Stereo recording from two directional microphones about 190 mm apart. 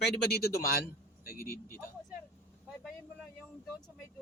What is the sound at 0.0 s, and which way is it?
Speech, 55° left (ahead or behind).